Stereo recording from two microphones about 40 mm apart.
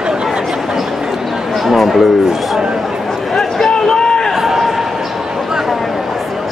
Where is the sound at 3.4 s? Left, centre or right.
Centre.